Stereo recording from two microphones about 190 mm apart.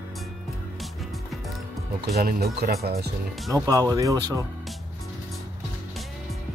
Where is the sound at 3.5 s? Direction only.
20° right (ahead or behind).